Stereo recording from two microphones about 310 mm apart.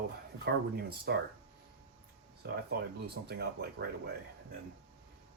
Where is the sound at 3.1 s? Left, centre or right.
Right.